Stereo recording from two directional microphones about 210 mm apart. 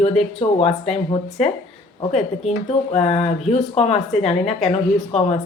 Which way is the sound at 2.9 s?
30° left (ahead or behind).